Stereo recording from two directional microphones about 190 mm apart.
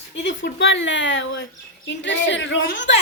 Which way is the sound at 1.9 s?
70° left (ahead or behind).